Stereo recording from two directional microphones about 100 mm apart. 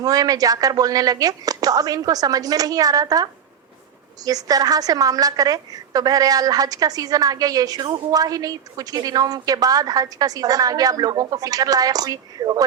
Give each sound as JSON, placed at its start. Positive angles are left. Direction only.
{"t": 0.0, "sound": "a woman's voice", "side_deg": -40}
{"t": 4.3, "sound": "a woman's voice", "side_deg": -40}